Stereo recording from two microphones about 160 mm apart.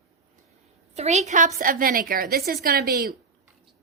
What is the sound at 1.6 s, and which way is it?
A woman's voice, 60° right (ahead or behind).